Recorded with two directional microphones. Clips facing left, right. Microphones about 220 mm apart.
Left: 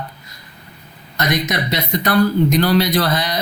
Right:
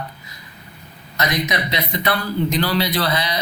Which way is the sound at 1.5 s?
45° left (ahead or behind).